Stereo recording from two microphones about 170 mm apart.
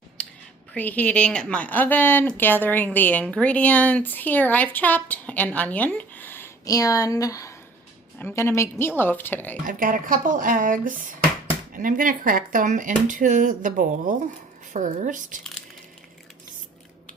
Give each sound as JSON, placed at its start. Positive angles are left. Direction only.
{"t": 0.7, "sound": "a woman's voice", "side_deg": 10}
{"t": 9.6, "sound": "speech", "side_deg": -55}